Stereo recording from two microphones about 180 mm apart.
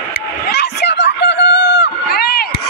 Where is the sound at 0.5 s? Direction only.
70° left (ahead or behind).